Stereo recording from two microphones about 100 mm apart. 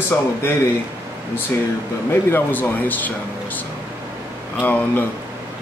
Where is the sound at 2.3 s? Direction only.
20° left (ahead or behind).